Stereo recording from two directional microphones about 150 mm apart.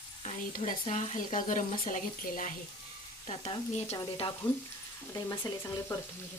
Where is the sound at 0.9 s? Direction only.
55° left (ahead or behind).